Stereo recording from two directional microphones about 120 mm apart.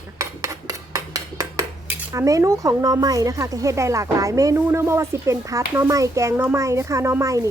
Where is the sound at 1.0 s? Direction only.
30° right (ahead or behind).